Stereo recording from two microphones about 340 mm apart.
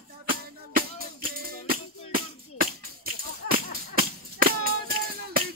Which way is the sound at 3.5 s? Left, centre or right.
Right.